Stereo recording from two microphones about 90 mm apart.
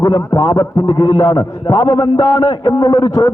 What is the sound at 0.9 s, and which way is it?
Speech, 80° left.